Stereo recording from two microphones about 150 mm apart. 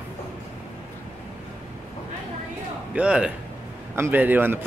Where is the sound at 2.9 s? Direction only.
5° right (ahead or behind).